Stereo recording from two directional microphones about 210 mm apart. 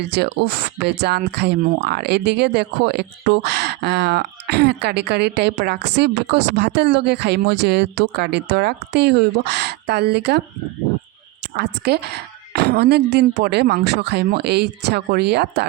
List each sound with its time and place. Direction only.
0.0 s speech: 50° right (ahead or behind)
11.5 s speech: 50° right (ahead or behind)